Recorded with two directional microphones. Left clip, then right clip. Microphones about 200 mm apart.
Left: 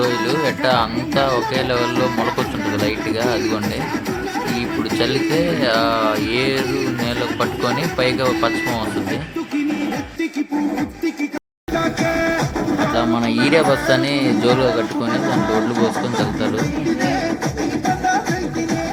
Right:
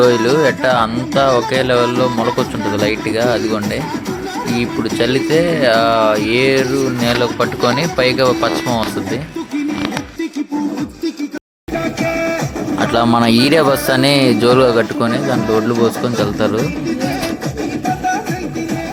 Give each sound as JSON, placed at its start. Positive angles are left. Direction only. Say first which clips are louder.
{"t": 0.0, "sound": "speech", "louder": "right 7 dB", "side_deg": -35}
{"t": 2.0, "sound": "speech", "louder": "right 3 dB", "side_deg": -55}
{"t": 2.8, "sound": "speech", "louder": "right 5 dB", "side_deg": -20}
{"t": 11.8, "sound": "music", "louder": "right 1 dB", "side_deg": -40}
{"t": 12.9, "sound": "speech", "louder": "right 6 dB", "side_deg": -55}